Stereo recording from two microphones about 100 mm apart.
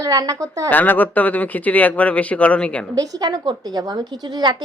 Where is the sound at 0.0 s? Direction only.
40° right (ahead or behind).